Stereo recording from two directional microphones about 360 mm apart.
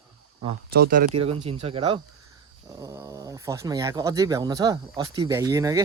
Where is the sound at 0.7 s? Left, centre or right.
Right; by 5.8 s centre.